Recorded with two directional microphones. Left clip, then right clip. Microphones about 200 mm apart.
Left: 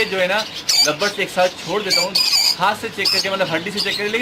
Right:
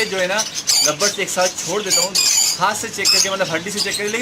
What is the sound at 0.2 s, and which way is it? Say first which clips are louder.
Speech: left 1 dB; 5° right (ahead or behind).